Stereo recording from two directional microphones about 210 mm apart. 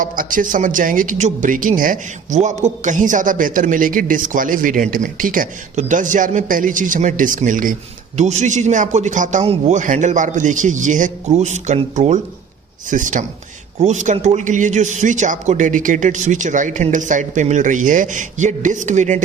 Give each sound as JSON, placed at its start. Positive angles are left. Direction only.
{"t": 0.0, "sound": "speech", "side_deg": -40}